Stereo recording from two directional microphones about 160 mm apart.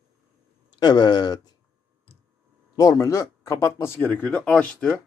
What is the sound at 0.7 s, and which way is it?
Speech, 25° left (ahead or behind).